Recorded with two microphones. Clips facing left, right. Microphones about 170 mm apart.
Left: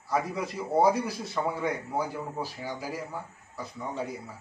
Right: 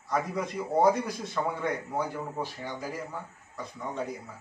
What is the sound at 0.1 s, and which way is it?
A man's voice, 5° left (ahead or behind).